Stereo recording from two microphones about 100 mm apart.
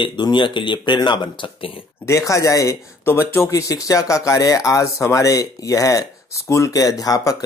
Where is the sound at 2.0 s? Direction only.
30° left (ahead or behind).